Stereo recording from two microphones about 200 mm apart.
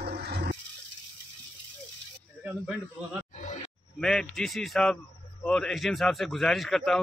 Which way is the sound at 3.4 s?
35° left (ahead or behind).